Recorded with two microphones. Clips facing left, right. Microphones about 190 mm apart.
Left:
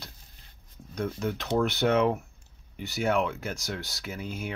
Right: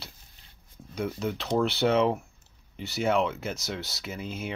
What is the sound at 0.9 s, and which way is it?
Speech, 10° right (ahead or behind).